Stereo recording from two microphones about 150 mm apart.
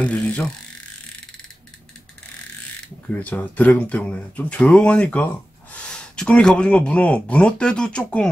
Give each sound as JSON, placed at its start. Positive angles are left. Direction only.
{"t": 0.0, "sound": "mechanisms", "side_deg": 10}
{"t": 3.1, "sound": "speech", "side_deg": 10}